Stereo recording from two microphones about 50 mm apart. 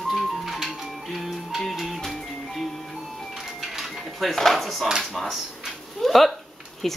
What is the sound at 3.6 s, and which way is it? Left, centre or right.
Dishes, centre.